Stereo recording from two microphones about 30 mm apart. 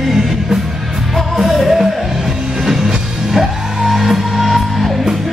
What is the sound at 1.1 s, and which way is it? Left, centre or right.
Music, centre.